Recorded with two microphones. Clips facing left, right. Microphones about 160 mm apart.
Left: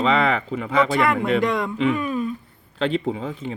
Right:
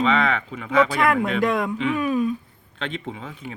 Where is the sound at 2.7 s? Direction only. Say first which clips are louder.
Left 8 dB; 35° left (ahead or behind).